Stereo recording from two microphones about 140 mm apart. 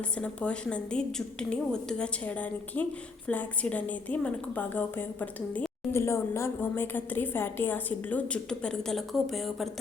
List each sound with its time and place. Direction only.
0.2 s a woman's voice: 10° left (ahead or behind)